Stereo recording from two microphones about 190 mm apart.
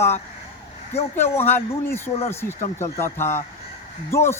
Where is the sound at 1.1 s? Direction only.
10° left (ahead or behind).